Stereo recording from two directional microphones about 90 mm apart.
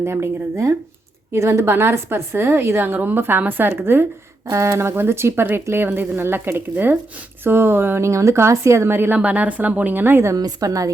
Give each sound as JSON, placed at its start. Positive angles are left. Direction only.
{"t": 0.0, "sound": "a woman's voice", "side_deg": -30}
{"t": 10.3, "sound": "a woman's voice", "side_deg": -40}